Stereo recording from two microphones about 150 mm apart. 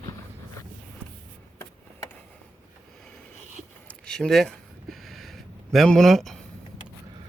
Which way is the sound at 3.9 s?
5° left (ahead or behind).